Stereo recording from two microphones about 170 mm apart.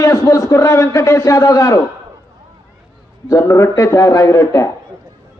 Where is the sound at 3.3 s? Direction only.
15° left (ahead or behind).